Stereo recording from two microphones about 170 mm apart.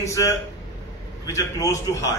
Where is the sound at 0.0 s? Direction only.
15° left (ahead or behind).